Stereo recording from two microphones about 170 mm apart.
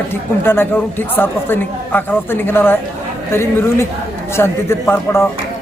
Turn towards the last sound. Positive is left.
turn(degrees=15)  # may be behind; listen again after turning